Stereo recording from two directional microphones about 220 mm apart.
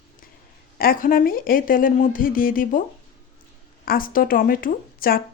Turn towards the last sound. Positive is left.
turn(degrees=40)  # may be behind; listen again after turning